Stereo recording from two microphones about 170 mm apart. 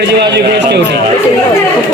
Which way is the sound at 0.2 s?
85° right.